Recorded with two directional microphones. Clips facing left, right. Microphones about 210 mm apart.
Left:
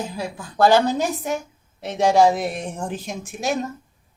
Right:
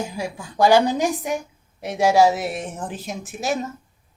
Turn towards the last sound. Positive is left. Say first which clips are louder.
# left 1 dB
turn(degrees=0)  # may be behind; listen again after turning